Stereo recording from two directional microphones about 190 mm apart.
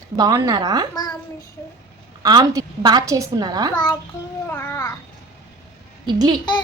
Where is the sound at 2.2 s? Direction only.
20° right (ahead or behind).